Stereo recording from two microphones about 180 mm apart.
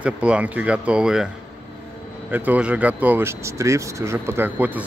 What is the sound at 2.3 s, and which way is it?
Speech, 10° right (ahead or behind).